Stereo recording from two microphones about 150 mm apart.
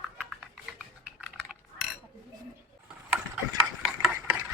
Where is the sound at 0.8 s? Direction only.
5° right (ahead or behind).